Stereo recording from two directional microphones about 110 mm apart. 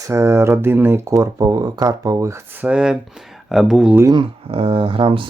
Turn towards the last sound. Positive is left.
turn(degrees=-50)  # may be behind; listen again after turning